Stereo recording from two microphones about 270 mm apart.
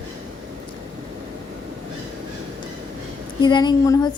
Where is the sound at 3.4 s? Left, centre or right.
Centre.